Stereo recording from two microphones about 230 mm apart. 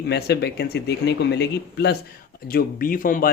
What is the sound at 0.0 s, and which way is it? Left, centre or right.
Speech, left.